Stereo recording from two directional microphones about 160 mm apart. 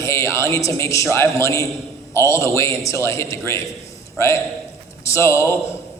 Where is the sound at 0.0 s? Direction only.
20° left (ahead or behind).